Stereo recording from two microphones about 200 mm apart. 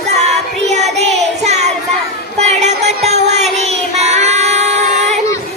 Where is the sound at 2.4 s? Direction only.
35° right (ahead or behind).